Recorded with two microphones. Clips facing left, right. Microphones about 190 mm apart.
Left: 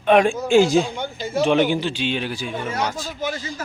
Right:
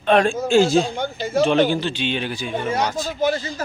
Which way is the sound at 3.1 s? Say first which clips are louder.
Right 9 dB; 35° right (ahead or behind).